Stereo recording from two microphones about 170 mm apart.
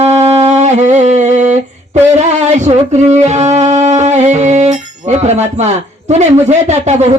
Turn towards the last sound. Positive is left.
turn(degrees=-40)  # may be behind; listen again after turning